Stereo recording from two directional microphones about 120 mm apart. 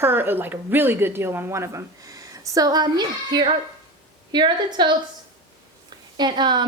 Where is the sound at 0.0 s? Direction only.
20° right (ahead or behind); by 4.9 s 40° right (ahead or behind).